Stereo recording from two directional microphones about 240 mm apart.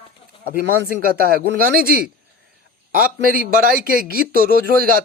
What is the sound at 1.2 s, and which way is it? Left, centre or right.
Speech, right.